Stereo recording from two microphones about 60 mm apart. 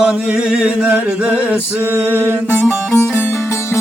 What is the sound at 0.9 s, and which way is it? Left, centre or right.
Mantra, right.